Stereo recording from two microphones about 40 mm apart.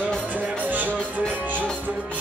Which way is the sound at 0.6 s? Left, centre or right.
Right.